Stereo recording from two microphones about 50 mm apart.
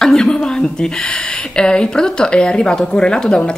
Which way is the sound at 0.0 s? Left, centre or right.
Centre.